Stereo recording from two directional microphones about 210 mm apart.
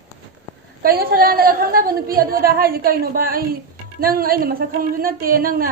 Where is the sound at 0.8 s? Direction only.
45° right (ahead or behind).